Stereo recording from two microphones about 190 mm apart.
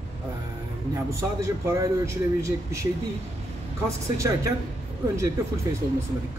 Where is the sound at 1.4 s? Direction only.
15° right (ahead or behind).